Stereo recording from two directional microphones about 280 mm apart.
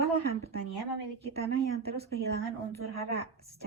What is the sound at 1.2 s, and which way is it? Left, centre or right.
Speech, right.